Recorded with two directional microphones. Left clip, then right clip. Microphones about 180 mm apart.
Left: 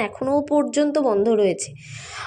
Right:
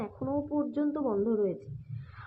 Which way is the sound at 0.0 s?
20° left (ahead or behind).